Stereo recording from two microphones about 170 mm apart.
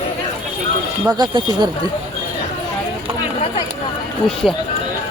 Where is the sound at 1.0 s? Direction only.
25° right (ahead or behind).